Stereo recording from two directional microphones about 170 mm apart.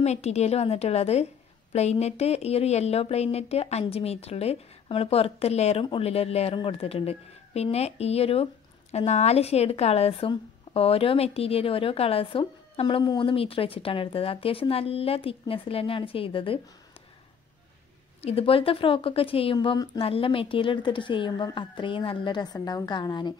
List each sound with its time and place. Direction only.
0.0 s speech: 40° left (ahead or behind)
18.2 s a woman's voice: 35° left (ahead or behind)